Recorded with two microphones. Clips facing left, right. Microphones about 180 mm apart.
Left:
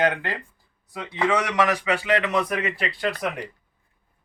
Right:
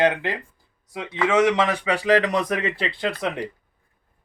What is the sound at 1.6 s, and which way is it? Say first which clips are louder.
Speech: even; 30° right (ahead or behind).